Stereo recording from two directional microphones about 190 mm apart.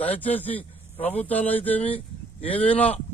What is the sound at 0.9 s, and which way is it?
Speech, 30° left (ahead or behind).